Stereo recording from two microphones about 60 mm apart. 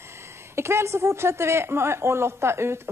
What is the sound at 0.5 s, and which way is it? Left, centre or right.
A woman's voice, right.